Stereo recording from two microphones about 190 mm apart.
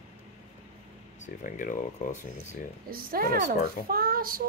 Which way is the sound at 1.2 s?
45° left (ahead or behind).